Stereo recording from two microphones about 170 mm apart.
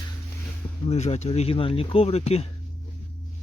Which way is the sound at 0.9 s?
40° left (ahead or behind).